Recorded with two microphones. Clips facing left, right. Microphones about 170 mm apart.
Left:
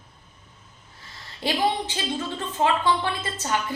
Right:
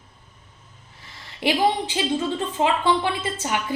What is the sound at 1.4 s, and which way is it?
A woman's voice, 15° right (ahead or behind).